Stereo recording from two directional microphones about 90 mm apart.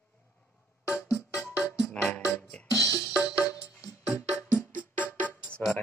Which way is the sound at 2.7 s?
40° left (ahead or behind).